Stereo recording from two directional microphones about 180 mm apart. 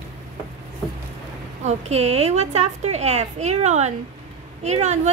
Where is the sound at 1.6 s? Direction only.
35° right (ahead or behind).